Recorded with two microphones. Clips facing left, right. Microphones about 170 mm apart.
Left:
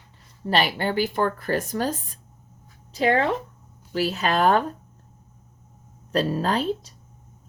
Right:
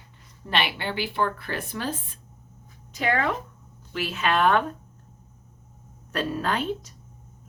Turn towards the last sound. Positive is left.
turn(degrees=35)  # may be behind; listen again after turning